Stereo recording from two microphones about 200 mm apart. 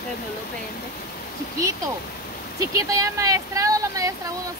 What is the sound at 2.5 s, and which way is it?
Speech, 15° right (ahead or behind).